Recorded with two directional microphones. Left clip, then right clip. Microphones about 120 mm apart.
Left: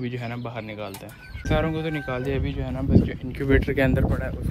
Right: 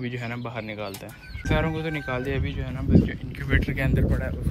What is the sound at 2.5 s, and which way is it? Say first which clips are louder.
Speech: left 1 dB; 40° left (ahead or behind).